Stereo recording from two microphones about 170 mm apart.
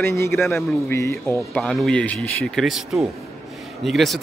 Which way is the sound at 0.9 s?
15° left (ahead or behind).